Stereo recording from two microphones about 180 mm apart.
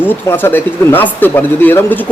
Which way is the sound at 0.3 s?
10° left (ahead or behind).